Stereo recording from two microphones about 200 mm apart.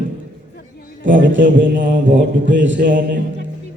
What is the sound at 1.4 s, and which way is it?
Mantra, 45° right (ahead or behind).